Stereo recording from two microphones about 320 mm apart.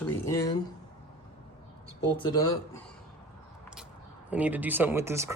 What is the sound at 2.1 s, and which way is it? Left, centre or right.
Speech, centre.